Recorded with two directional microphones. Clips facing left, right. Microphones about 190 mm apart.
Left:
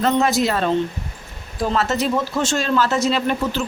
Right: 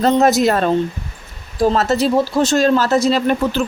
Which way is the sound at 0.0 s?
40° right (ahead or behind).